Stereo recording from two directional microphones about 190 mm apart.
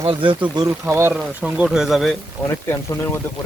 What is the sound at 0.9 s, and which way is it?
Speech, 15° right (ahead or behind).